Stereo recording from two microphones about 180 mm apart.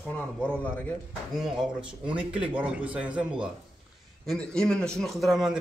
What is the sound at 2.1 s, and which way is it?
A man's voice, 5° right (ahead or behind).